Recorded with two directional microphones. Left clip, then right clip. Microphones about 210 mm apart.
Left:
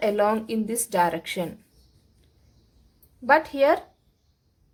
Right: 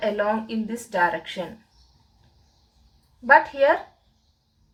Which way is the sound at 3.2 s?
45° left (ahead or behind).